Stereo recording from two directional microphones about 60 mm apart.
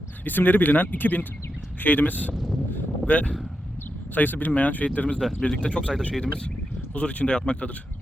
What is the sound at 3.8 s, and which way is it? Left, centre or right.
Speech, left.